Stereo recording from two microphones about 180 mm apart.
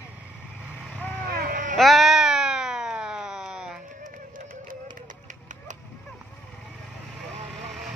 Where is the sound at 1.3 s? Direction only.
50° right (ahead or behind).